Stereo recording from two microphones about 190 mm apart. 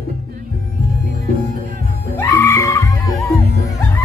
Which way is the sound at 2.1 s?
15° left (ahead or behind).